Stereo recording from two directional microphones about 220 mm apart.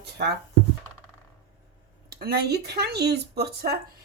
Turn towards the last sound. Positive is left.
turn(degrees=-45)  # may be behind; listen again after turning